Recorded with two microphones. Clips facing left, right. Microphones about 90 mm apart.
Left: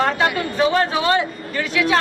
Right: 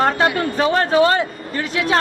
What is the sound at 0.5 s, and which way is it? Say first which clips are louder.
Speech: right 3 dB; 40° right (ahead or behind).